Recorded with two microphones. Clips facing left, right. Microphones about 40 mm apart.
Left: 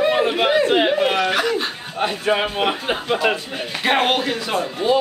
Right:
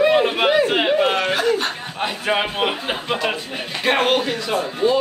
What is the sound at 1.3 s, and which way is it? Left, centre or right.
Speech, left.